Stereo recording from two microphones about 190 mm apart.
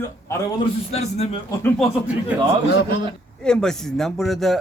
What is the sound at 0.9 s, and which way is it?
Speech, 35° left (ahead or behind).